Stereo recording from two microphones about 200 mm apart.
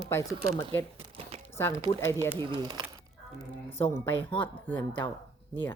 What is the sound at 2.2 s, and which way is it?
Speech, 20° right (ahead or behind).